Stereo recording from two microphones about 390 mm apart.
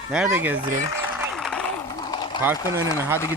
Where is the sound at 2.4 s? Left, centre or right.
Centre.